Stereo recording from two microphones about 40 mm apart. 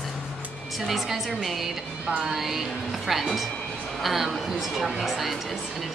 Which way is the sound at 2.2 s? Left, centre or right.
Centre.